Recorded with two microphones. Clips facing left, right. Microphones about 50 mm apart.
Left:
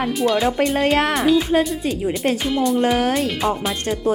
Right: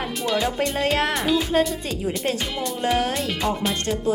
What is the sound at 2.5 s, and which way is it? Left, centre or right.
Speech, centre.